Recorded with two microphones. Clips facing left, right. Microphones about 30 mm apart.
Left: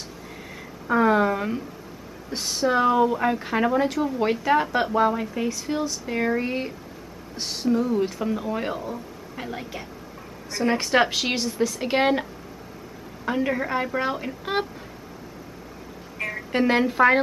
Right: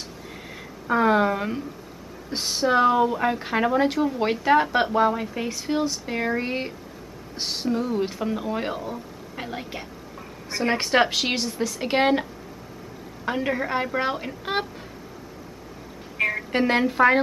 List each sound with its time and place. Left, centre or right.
0.8 s speech: centre
8.2 s a woman's voice: centre
11.0 s speech: centre
16.2 s a sound: right
16.5 s speech: centre